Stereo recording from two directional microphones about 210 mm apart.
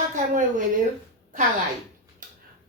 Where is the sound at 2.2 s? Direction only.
40° right (ahead or behind).